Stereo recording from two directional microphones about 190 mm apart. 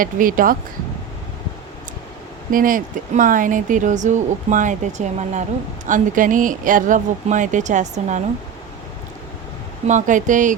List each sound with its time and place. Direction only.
0.0 s speech: 45° right (ahead or behind)
2.5 s speech: 45° right (ahead or behind)
9.8 s speech: 40° right (ahead or behind)